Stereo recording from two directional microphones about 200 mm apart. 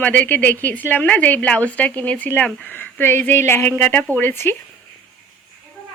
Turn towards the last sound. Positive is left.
turn(degrees=10)  # may be behind; listen again after turning